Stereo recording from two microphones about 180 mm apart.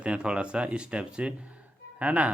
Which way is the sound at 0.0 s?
5° right (ahead or behind).